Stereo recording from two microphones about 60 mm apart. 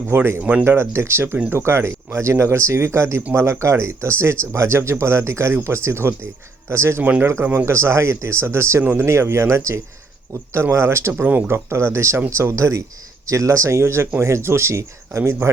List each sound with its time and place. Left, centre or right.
0.1 s speech: right
7.0 s speech: right
7.5 s speech: right
8.8 s speech: right
9.0 s speech: right